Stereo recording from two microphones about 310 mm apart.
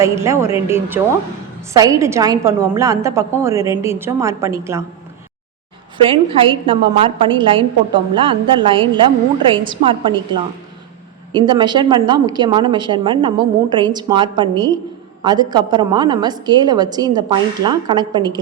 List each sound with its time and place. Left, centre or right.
0.0 s a woman's voice: centre
6.1 s a woman's voice: centre